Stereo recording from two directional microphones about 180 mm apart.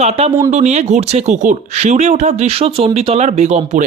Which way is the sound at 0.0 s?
35° right (ahead or behind).